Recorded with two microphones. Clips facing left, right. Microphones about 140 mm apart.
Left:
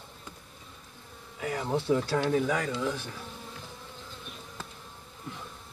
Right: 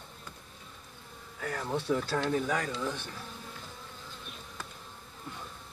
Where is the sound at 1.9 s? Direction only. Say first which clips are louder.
Left 3 dB; 10° left (ahead or behind).